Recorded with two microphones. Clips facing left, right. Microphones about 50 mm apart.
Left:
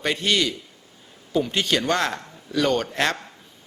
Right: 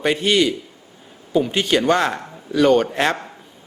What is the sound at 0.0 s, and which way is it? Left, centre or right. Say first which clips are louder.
A man's voice: right 5 dB; centre.